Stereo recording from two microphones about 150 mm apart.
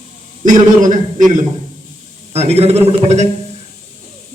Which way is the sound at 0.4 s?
60° right (ahead or behind).